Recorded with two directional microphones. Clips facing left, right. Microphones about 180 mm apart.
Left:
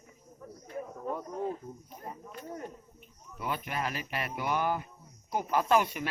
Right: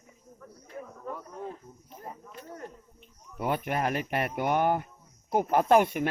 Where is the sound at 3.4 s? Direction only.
55° right (ahead or behind).